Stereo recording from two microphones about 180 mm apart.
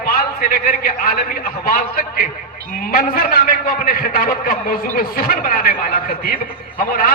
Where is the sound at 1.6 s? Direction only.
55° left (ahead or behind).